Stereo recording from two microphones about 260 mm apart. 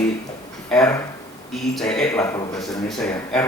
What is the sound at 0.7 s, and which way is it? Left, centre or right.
A man's voice, centre.